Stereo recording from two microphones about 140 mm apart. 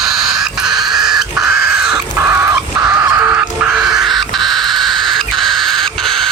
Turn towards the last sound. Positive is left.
turn(degrees=0)  # may be behind; listen again after turning